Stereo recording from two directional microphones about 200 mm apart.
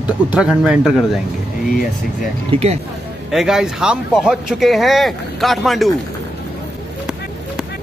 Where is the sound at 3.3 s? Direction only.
Centre (ahead or behind).